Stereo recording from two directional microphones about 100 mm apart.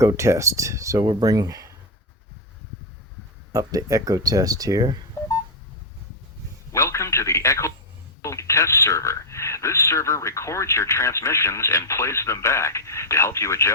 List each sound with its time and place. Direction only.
0.0 s speech: 30° right (ahead or behind)
1.0 s speech: 40° right (ahead or behind)
3.5 s speech: 35° right (ahead or behind)
5.2 s telephone dialing: 25° left (ahead or behind)
6.7 s a sound: 30° left (ahead or behind)
8.2 s a man's voice: 30° left (ahead or behind)